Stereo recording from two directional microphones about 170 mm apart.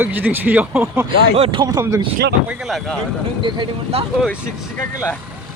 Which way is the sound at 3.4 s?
30° right (ahead or behind).